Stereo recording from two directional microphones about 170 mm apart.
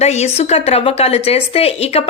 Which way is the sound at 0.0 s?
40° left (ahead or behind).